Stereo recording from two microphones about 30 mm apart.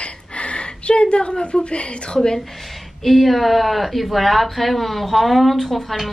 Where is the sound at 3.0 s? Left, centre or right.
Centre.